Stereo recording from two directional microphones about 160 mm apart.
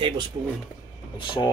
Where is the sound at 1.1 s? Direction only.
30° left (ahead or behind).